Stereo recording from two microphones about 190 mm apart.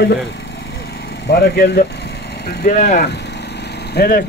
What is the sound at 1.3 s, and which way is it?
Speech, 55° left (ahead or behind).